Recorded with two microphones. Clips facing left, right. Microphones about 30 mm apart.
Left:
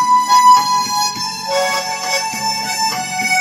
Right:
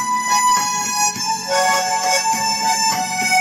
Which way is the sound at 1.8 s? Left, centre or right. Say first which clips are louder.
Right 1 dB; centre.